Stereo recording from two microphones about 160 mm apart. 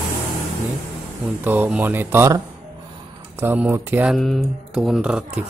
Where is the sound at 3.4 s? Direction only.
15° right (ahead or behind).